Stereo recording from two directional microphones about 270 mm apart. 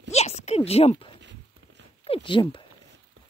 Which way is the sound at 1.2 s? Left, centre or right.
Right.